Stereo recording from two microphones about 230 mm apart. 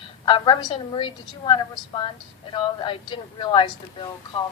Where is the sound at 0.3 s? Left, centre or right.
Left.